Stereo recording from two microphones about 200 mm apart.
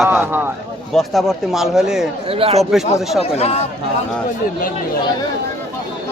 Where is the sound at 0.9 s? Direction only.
Centre (ahead or behind).